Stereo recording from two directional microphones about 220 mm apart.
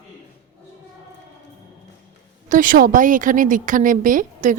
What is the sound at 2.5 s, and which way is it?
A woman's voice, 40° right (ahead or behind).